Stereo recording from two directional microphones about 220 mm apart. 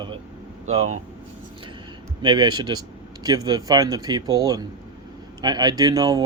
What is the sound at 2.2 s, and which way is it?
Speech, 20° right (ahead or behind).